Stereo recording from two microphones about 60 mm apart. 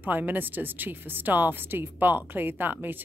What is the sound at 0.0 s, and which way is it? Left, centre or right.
Speech, right.